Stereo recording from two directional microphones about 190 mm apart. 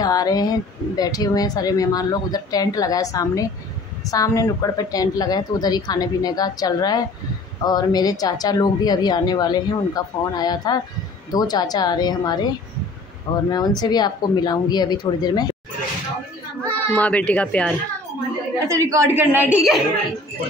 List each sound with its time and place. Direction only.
0.0 s speech: 20° left (ahead or behind)
16.6 s a child's voice: 10° left (ahead or behind)
18.6 s a woman's voice: 15° right (ahead or behind)